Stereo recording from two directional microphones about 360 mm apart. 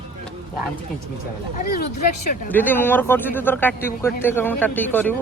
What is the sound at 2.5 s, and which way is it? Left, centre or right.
A man's voice, centre.